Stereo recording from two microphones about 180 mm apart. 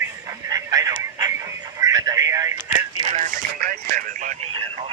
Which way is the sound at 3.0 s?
30° right (ahead or behind).